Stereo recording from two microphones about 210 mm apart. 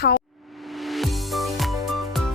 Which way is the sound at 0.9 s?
Centre (ahead or behind).